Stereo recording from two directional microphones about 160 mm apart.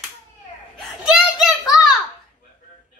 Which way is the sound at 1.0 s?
5° right (ahead or behind).